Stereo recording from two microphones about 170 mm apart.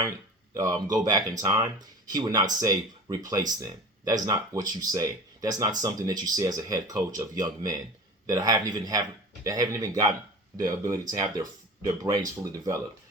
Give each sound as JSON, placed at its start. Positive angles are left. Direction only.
{"t": 0.5, "sound": "speech", "side_deg": -20}